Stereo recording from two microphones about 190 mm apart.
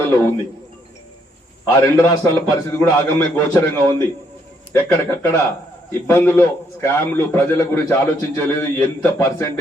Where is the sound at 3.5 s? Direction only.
15° left (ahead or behind).